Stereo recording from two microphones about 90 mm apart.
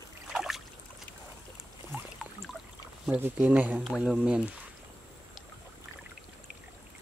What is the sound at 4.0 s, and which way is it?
Speech, 5° right (ahead or behind).